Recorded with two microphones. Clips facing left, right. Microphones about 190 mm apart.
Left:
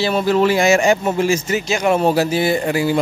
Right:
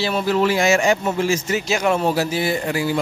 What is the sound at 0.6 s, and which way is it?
Speech, 45° left (ahead or behind).